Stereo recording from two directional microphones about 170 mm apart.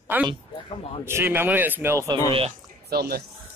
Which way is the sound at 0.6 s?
35° left (ahead or behind).